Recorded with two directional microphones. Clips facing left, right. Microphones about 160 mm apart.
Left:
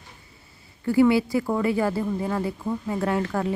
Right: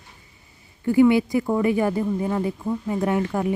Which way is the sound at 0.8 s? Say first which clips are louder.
Right 2 dB; 20° right (ahead or behind).